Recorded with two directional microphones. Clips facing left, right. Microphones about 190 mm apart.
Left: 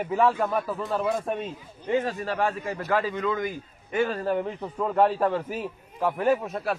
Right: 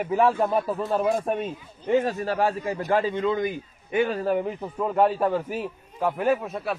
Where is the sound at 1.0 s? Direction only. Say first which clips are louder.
Right 3 dB; 45° right (ahead or behind).